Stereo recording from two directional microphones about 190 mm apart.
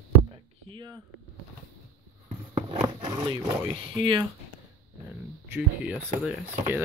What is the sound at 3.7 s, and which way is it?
Speech, 25° right (ahead or behind).